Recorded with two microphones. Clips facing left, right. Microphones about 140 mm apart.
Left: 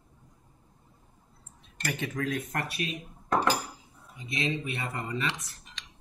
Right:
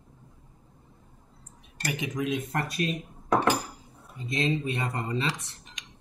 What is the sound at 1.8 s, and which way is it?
Speech, 15° right (ahead or behind).